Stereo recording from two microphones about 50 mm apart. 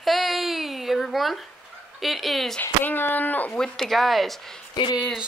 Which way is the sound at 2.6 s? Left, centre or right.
Left.